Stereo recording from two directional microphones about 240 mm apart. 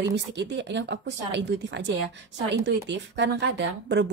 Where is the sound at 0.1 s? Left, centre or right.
Right.